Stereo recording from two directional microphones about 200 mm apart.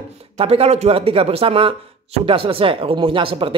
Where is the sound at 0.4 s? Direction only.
30° right (ahead or behind).